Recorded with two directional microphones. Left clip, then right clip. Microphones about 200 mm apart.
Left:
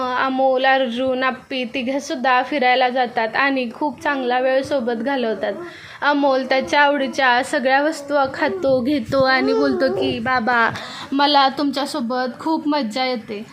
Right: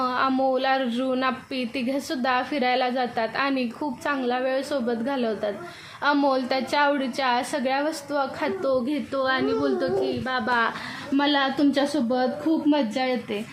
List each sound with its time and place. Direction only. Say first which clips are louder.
0.0 s a woman's voice: left 5 dB; 10° left (ahead or behind)
8.9 s a woman's voice: left 8 dB; 30° left (ahead or behind)
11.2 s a woman's voice: left 7 dB; 35° left (ahead or behind)